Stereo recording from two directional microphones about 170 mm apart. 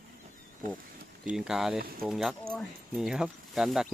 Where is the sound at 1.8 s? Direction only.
60° right (ahead or behind).